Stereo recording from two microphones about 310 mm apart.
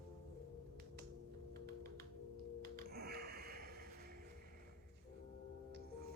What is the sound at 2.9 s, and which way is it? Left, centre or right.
Snort, right.